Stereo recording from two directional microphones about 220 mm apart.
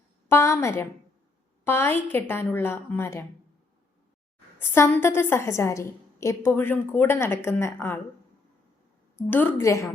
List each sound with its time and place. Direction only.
0.3 s a woman's voice: 10° left (ahead or behind)
4.7 s a woman's voice: 10° left (ahead or behind)
9.1 s a woman's voice: 10° left (ahead or behind)